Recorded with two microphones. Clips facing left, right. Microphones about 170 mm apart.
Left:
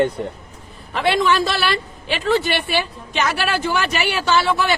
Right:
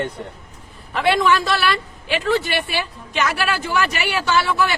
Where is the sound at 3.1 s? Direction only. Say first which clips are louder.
Left 1 dB; 30° left (ahead or behind).